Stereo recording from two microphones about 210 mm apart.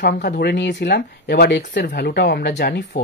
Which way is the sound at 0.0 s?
45° left (ahead or behind).